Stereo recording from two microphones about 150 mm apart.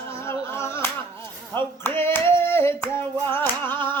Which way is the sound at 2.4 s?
15° left (ahead or behind).